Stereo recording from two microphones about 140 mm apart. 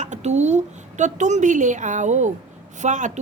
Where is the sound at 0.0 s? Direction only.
55° right (ahead or behind).